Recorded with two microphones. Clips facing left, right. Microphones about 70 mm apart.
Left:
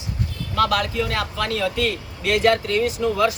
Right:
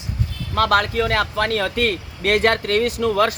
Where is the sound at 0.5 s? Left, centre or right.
Right.